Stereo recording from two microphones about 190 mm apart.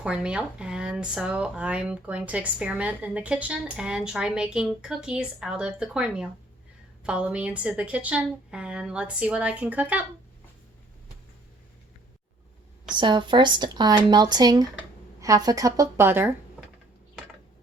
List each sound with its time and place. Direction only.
0.0 s a woman's voice: 5° right (ahead or behind)
12.9 s speech: 25° right (ahead or behind)